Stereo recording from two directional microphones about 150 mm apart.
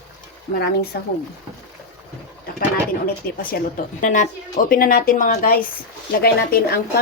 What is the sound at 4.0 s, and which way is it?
A woman's voice, 60° left (ahead or behind).